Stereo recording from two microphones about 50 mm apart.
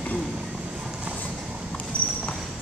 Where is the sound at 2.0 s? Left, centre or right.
Left.